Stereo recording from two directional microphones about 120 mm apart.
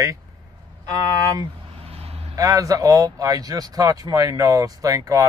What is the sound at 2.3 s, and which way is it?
Speech, 30° right (ahead or behind).